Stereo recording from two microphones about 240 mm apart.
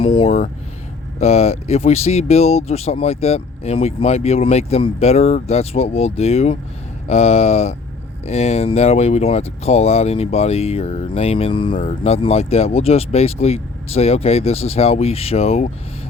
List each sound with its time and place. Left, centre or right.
0.0 s speech: left